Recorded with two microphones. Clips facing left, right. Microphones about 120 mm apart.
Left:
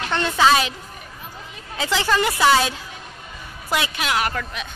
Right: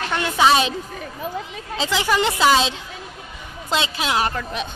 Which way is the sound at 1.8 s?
15° right (ahead or behind).